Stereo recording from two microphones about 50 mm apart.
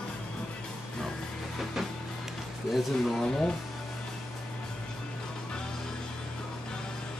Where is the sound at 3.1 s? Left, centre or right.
Centre.